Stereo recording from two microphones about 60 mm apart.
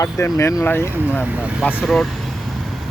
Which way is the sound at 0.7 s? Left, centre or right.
Left.